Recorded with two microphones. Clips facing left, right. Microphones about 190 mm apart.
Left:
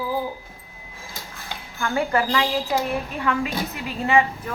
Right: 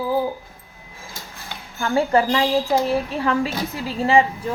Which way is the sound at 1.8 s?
30° right (ahead or behind).